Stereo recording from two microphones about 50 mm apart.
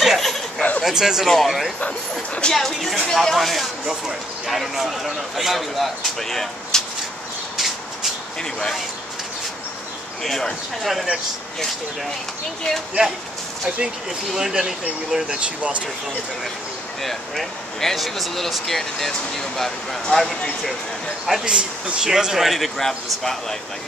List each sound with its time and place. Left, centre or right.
0.0 s a sound: centre
0.6 s a sound: left
0.8 s speech: centre
1.2 s speech: centre
7.5 s a sound: centre
8.4 s speech: centre
10.2 s speech: centre
14.3 s speech: centre
15.4 s speech: right
17.0 s speech: centre
21.5 s speech: centre
22.1 s speech: centre